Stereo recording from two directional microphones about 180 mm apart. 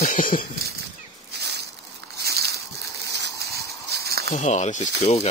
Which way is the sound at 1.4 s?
70° right (ahead or behind).